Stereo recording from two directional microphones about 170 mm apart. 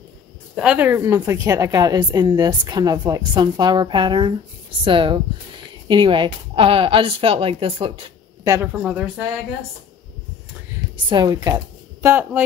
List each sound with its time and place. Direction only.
0.6 s a woman's voice: 10° right (ahead or behind); by 8.0 s 30° right (ahead or behind)
8.7 s speech: 5° right (ahead or behind)
11.1 s speech: 25° right (ahead or behind)